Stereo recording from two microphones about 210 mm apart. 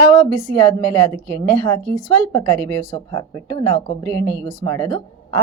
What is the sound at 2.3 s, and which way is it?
A woman's voice, 10° left (ahead or behind).